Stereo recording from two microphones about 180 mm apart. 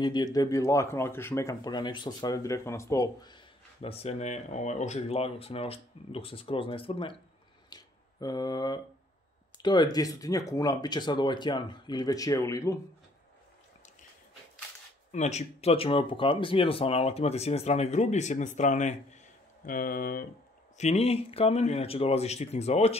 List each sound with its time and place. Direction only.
0.0 s speech: 25° left (ahead or behind)
7.7 s a sound: 20° left (ahead or behind)
9.6 s speech: 25° left (ahead or behind)
15.0 s speech: 40° left (ahead or behind)
20.7 s speech: 35° left (ahead or behind)